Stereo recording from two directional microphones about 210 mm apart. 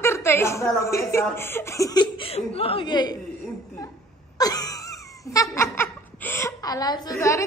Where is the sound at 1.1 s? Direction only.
10° left (ahead or behind).